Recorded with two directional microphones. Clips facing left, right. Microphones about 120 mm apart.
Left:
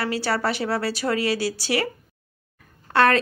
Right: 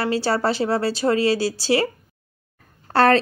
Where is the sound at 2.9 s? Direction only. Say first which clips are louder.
Right 3 dB; 35° right (ahead or behind).